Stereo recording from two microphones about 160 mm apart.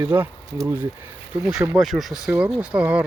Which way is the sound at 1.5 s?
5° right (ahead or behind).